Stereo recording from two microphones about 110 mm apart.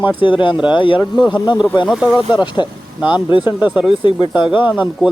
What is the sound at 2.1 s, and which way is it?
Speech, 45° left (ahead or behind).